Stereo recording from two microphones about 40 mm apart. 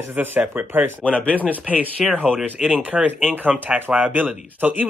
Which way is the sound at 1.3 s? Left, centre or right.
Right.